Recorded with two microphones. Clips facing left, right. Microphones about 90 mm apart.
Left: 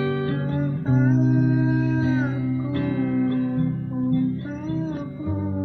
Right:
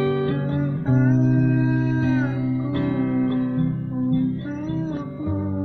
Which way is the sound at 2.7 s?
40° right (ahead or behind).